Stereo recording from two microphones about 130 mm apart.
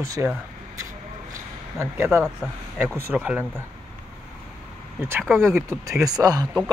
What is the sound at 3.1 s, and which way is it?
Speech, 5° right (ahead or behind).